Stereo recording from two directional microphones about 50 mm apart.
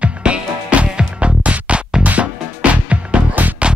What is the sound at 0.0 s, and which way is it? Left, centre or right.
Music, right.